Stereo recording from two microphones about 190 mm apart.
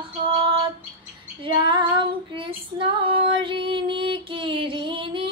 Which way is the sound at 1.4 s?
25° right (ahead or behind).